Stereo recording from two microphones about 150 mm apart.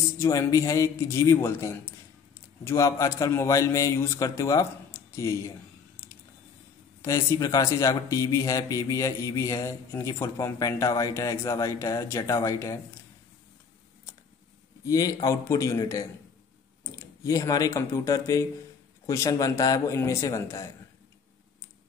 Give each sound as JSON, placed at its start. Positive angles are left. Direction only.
{"t": 0.2, "sound": "speech", "side_deg": 20}
{"t": 7.0, "sound": "speech", "side_deg": 20}
{"t": 14.9, "sound": "speech", "side_deg": 25}